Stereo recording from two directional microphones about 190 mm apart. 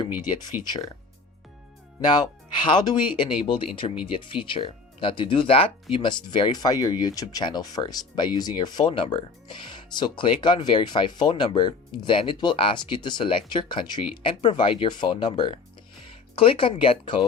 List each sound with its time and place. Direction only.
0.6 s speech: 20° left (ahead or behind)
2.6 s speech: 25° left (ahead or behind)